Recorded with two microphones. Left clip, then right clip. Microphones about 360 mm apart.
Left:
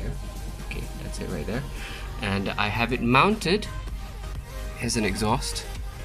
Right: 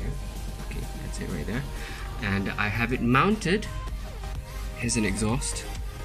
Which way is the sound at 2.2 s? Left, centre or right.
Centre.